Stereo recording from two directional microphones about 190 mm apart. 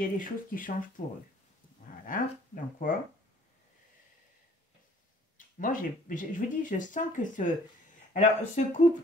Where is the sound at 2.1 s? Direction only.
45° left (ahead or behind).